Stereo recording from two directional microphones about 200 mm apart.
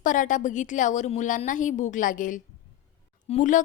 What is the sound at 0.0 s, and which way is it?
A woman's voice, 40° left (ahead or behind).